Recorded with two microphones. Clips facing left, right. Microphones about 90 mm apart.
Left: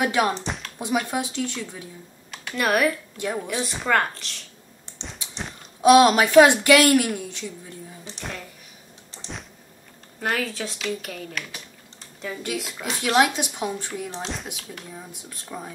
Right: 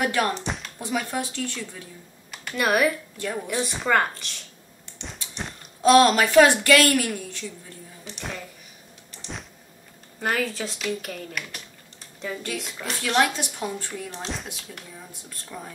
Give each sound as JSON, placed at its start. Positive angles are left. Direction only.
{"t": 0.0, "sound": "a woman's voice", "side_deg": 15}
{"t": 2.3, "sound": "a woman's voice", "side_deg": 0}
{"t": 5.8, "sound": "a woman's voice", "side_deg": 15}
{"t": 8.2, "sound": "a sound", "side_deg": 0}
{"t": 9.1, "sound": "power windows", "side_deg": 30}
{"t": 10.2, "sound": "a woman's voice", "side_deg": 0}
{"t": 14.2, "sound": "a woman's voice", "side_deg": 0}
{"t": 14.9, "sound": "a woman's voice", "side_deg": 15}